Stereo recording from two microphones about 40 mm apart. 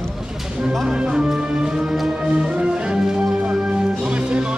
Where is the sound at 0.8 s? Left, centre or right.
Right.